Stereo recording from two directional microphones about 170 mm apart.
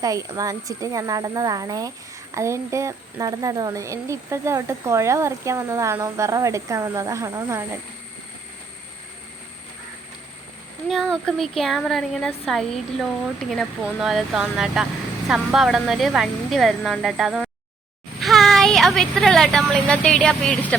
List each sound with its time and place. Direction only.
0.0 s speech: 20° right (ahead or behind)
10.8 s speech: centre (ahead or behind)
18.2 s vehicle: centre (ahead or behind)
19.7 s speech: 5° left (ahead or behind)